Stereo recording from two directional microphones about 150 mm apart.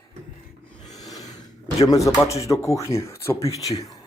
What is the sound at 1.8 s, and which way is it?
Speech, 20° left (ahead or behind).